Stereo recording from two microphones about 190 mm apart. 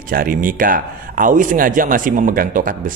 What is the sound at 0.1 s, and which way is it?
Speech, 45° right (ahead or behind).